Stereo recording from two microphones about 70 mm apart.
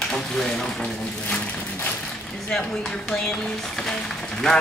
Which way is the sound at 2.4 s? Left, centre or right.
Centre.